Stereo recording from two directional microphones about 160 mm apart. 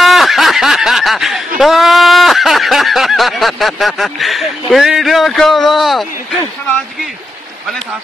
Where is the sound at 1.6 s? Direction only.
Centre (ahead or behind).